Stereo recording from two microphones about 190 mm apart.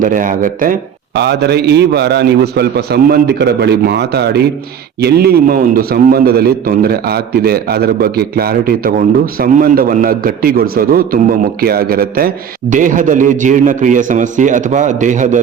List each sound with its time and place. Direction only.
0.0 s a man's voice: 45° right (ahead or behind)